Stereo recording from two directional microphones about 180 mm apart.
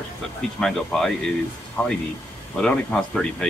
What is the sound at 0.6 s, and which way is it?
Speech, centre (ahead or behind).